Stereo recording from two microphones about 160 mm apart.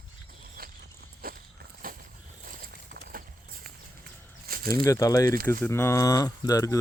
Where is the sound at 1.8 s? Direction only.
65° right (ahead or behind).